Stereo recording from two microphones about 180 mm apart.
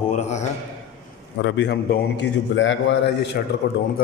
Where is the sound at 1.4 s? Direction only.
80° left.